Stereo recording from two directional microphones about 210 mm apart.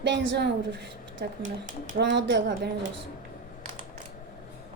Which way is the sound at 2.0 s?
55° right (ahead or behind).